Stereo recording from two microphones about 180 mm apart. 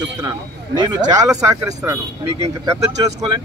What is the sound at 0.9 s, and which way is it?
Speech, 20° right (ahead or behind).